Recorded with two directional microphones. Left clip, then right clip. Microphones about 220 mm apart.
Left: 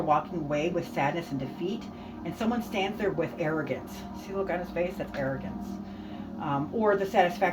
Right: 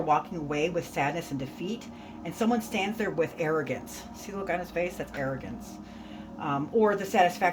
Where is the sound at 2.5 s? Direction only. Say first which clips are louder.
Even; 50° right (ahead or behind).